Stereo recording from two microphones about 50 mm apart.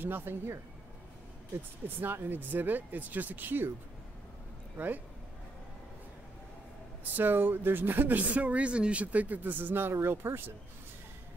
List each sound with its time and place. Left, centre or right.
0.0 s speech: right
2.0 s speech: right
4.7 s speech: right
7.2 s speech: right